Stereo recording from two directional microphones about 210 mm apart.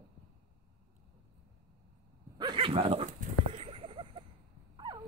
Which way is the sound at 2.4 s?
25° right (ahead or behind).